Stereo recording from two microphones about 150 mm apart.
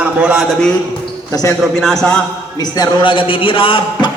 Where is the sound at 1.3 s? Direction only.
20° left (ahead or behind).